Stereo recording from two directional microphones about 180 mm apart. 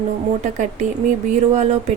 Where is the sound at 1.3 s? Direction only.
40° right (ahead or behind).